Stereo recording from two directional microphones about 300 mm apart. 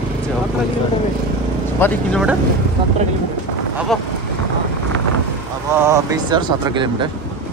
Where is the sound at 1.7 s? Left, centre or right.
Centre.